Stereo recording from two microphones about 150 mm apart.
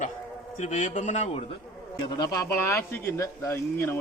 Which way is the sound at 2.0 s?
25° left (ahead or behind).